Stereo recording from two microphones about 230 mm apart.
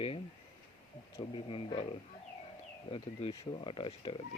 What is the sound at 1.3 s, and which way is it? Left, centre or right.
Speech, left.